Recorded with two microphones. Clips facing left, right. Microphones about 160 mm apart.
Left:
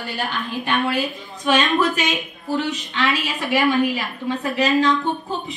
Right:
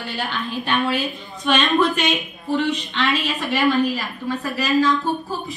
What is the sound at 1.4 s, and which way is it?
A woman's voice, 5° left (ahead or behind).